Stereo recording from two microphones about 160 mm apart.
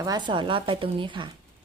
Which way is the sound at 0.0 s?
25° right (ahead or behind).